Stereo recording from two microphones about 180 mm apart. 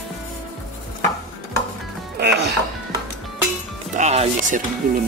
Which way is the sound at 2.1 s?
65° right (ahead or behind).